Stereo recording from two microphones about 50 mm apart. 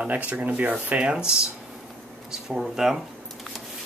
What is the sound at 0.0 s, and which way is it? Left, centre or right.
Speech, right.